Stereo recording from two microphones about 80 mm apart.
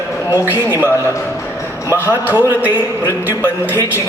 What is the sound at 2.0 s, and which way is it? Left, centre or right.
Speech, right.